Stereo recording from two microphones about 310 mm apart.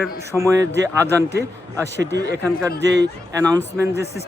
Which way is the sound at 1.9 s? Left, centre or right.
Right.